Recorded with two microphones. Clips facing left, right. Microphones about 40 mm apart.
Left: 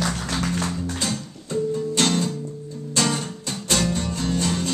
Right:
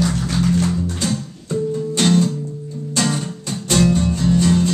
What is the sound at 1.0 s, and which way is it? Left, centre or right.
Music, centre.